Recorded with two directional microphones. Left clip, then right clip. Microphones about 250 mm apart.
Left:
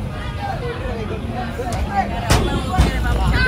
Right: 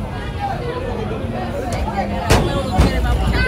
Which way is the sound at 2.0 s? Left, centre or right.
Centre.